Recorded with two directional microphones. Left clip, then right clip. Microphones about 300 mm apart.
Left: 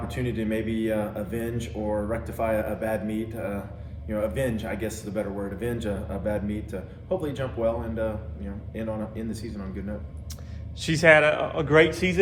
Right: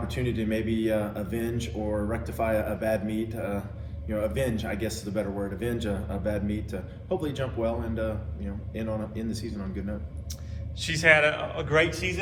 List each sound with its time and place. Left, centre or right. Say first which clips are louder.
0.1 s a man's voice: left 1 dB; centre
10.8 s a man's voice: left 3 dB; left